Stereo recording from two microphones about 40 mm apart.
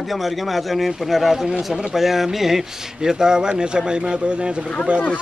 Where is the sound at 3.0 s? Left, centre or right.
Centre.